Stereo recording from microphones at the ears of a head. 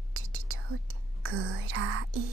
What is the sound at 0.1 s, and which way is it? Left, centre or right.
Whispering, right.